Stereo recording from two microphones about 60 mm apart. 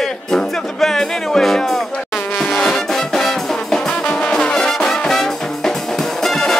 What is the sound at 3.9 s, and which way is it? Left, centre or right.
Music, centre.